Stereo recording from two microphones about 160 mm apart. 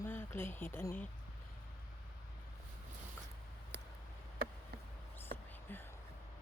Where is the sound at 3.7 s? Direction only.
90° right.